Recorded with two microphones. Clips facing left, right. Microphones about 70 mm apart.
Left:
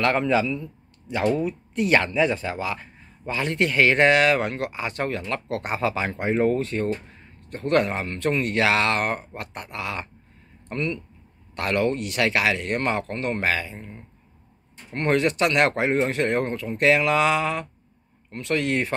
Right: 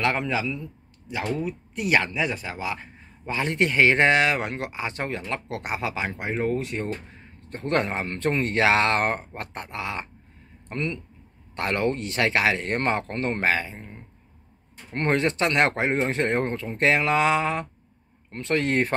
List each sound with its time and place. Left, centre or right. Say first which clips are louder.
0.0 s a man's voice: left 4 dB; centre
2.7 s speech: left 1 dB; right; by 6.6 s centre
6.6 s speech: left 4 dB; centre
7.4 s speech: left 3 dB; right
15.0 s speech: left 2 dB; right